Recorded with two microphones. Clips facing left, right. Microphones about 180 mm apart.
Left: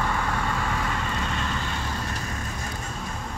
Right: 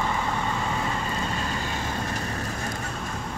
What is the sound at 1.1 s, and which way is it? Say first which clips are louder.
Vehicle: even; 35° right (ahead or behind).